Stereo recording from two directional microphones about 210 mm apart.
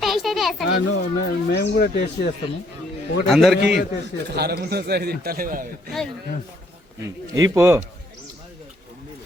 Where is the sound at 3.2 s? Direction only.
Centre (ahead or behind).